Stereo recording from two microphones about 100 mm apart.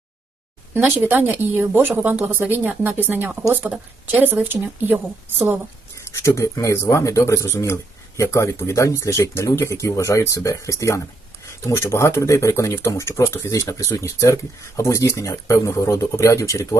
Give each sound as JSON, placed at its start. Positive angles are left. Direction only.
{"t": 0.7, "sound": "speech", "side_deg": -20}
{"t": 6.1, "sound": "speech", "side_deg": 30}